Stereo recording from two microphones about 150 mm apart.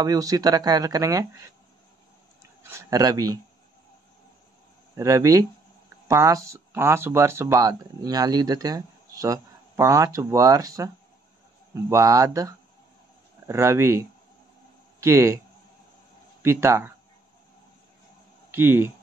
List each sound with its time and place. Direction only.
0.0 s speech: 25° right (ahead or behind)
2.7 s speech: 20° right (ahead or behind)
4.9 s speech: 20° right (ahead or behind)
16.4 s speech: 15° right (ahead or behind)
18.5 s speech: 15° right (ahead or behind)